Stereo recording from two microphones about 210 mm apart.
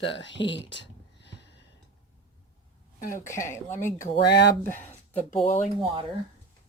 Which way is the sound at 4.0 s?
50° left (ahead or behind).